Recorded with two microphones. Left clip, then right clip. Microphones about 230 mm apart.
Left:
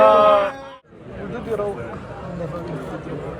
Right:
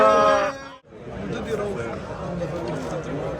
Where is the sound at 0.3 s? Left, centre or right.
Left.